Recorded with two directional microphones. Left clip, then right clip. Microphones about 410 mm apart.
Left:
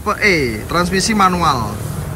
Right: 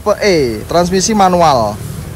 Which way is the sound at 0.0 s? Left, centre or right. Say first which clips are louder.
Right 3 dB; centre.